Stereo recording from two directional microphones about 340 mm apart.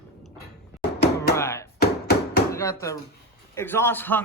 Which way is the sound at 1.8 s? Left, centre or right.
Left.